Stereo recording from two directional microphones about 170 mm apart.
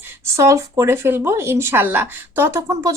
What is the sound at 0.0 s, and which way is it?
Speech, 15° right (ahead or behind).